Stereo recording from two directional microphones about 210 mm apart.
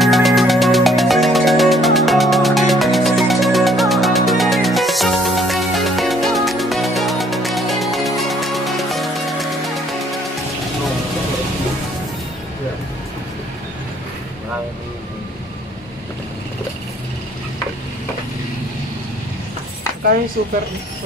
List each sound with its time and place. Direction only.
0.0 s music: centre (ahead or behind)
20.4 s speech: 45° right (ahead or behind)